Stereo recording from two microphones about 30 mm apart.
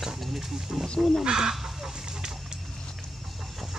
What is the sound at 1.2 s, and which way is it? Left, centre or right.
Speech, right.